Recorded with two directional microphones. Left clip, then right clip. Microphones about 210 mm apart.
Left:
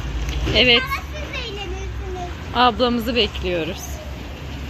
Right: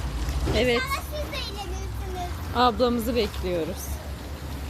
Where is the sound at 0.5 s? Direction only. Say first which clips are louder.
Left 9 dB; 5° right (ahead or behind).